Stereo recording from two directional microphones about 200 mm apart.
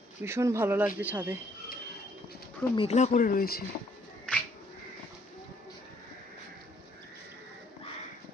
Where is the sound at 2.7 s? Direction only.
30° left (ahead or behind); by 3.6 s 45° left (ahead or behind).